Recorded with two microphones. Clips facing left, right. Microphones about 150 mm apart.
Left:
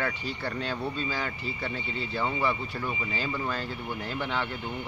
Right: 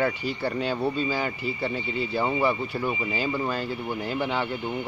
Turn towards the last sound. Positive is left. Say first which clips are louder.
# right 4 dB
turn(degrees=-10)  # may be behind; listen again after turning